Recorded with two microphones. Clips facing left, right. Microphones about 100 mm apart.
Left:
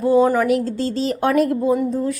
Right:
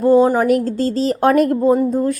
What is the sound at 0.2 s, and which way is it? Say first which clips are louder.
Speech: right 2 dB; 25° right (ahead or behind).